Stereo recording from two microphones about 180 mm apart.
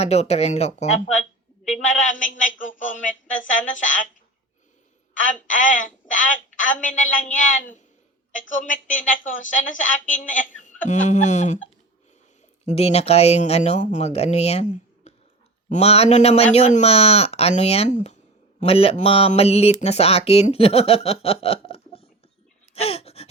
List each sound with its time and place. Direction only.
0.0 s speech: 35° left (ahead or behind)
2.4 s a sound: 45° left (ahead or behind)
3.3 s speech: 45° left (ahead or behind)
5.2 s speech: 45° left (ahead or behind)
12.6 s speech: 35° left (ahead or behind)
22.7 s a sound: 35° left (ahead or behind)